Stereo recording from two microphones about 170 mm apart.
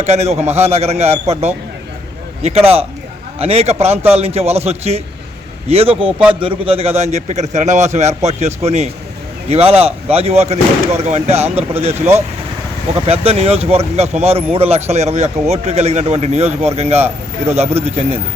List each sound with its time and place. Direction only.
0.0 s speech: 40° right (ahead or behind)
6.1 s a man's voice: 5° right (ahead or behind)
6.4 s speech: 35° right (ahead or behind)
13.1 s speech: 35° right (ahead or behind)